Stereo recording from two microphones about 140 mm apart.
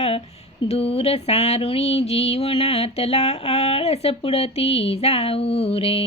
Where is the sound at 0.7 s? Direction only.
45° left (ahead or behind).